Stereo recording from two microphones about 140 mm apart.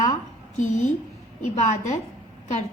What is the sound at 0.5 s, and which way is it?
A child's voice, 60° left (ahead or behind).